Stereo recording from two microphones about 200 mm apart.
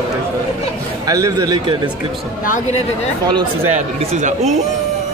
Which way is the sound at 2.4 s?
40° left (ahead or behind).